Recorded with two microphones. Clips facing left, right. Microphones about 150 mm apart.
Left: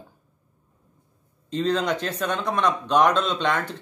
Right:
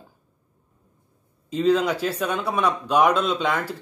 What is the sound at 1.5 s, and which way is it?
Speech, 5° right (ahead or behind).